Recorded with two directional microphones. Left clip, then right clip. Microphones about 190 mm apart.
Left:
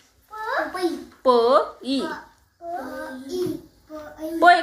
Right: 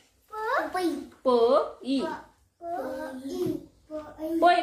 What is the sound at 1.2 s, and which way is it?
Speech, 25° left (ahead or behind).